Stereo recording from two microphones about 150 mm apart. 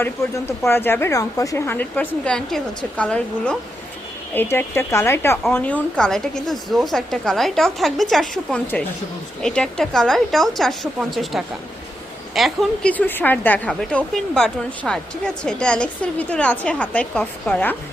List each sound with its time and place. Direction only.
0.0 s a woman's voice: 15° left (ahead or behind); by 12.9 s centre (ahead or behind)
12.9 s speech: 10° left (ahead or behind)